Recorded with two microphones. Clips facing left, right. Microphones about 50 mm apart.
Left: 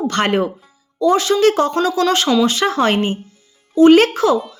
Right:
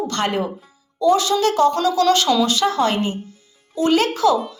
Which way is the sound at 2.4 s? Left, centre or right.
Left.